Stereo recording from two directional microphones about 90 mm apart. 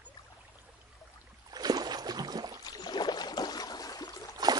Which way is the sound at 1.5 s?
50° right (ahead or behind).